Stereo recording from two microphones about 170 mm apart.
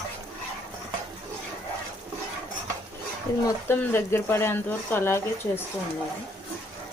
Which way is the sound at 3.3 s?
20° left (ahead or behind).